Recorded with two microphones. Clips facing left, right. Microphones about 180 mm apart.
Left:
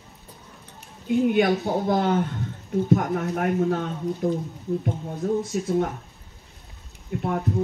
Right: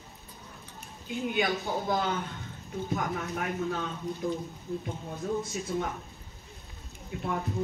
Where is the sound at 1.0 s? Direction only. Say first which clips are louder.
Left 10 dB; 55° left (ahead or behind).